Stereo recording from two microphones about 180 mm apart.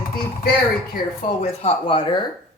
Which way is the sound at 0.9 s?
40° left (ahead or behind).